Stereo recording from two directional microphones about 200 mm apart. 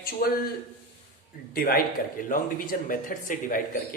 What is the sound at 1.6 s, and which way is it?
Speech, 45° left (ahead or behind).